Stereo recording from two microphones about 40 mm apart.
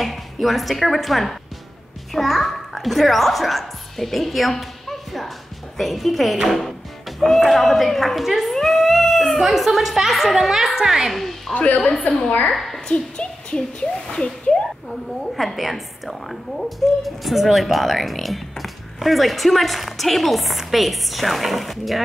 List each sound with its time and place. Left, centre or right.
0.0 s a child's voice: centre
6.5 s music: centre
7.4 s a woman's voice: centre
11.1 s a woman's voice: centre
11.5 s a woman's voice: left
12.4 s a woman's voice: centre
12.8 s a woman's voice: left
15.3 s a woman's voice: centre